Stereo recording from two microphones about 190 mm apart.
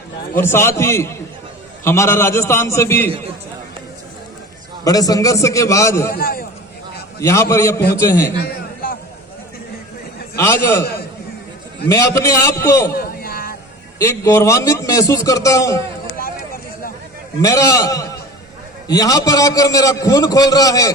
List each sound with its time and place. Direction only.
0.3 s a man's voice: 15° left (ahead or behind)
4.8 s a man's voice: 20° left (ahead or behind)
6.1 s a man's voice: 50° left (ahead or behind)
7.2 s a man's voice: 15° left (ahead or behind)
8.4 s a sound: 50° left (ahead or behind)
10.3 s a man's voice: 15° left (ahead or behind)
11.9 s a man's voice: 15° left (ahead or behind)
12.9 s a sound: 50° left (ahead or behind)
14.0 s a man's voice: 15° left (ahead or behind)
17.4 s a man's voice: 20° left (ahead or behind)